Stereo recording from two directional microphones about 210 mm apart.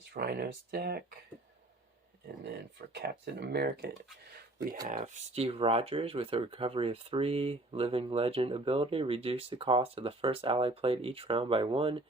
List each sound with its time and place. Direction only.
0.0 s speech: 45° right (ahead or behind)
2.9 s speech: 50° right (ahead or behind)
4.9 s speech: 35° right (ahead or behind)